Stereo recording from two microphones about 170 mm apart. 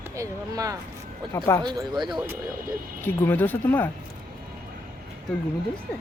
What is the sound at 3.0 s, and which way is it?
Speech, 15° left (ahead or behind).